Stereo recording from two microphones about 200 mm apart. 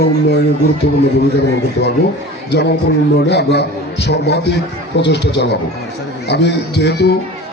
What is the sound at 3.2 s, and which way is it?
A man's voice, 60° left (ahead or behind).